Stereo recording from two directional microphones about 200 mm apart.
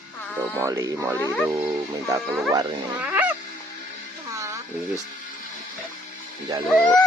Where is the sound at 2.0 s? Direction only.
15° right (ahead or behind).